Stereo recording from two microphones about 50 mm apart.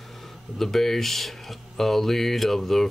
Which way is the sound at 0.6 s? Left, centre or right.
Centre.